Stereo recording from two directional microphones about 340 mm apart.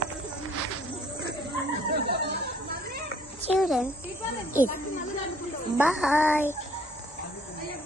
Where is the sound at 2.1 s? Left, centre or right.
Right.